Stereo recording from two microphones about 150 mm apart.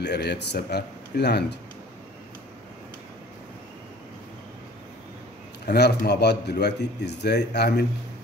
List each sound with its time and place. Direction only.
0.2 s a man's voice: 90° left
5.7 s a man's voice: 90° left